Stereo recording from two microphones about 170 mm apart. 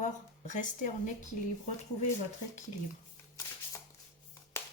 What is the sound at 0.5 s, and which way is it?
Speech, 45° left (ahead or behind).